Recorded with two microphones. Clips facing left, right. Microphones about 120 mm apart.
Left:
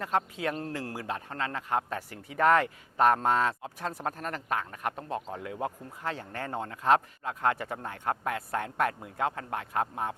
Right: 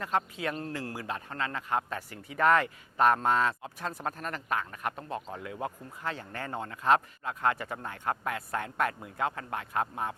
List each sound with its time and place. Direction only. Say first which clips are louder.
0.0 s speech: left 1 dB; 50° left (ahead or behind)